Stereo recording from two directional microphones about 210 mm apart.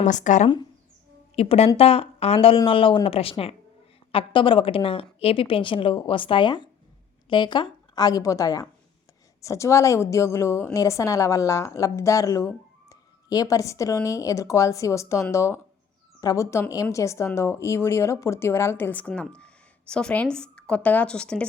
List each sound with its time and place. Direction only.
0.0 s a woman's voice: 35° left (ahead or behind); by 21.4 s 5° left (ahead or behind)